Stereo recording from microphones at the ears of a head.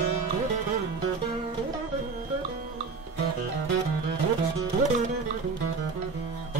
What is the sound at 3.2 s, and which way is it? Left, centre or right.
Music, right.